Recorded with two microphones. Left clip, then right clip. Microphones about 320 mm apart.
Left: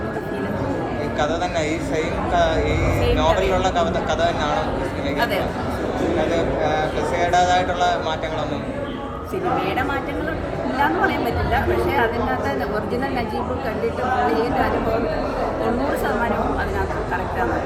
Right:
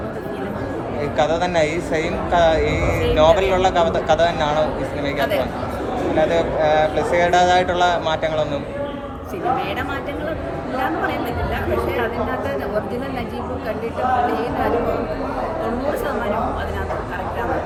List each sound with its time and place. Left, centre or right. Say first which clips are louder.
1.2 s speech: right 5 dB; right
6.3 s speech: right 4 dB; right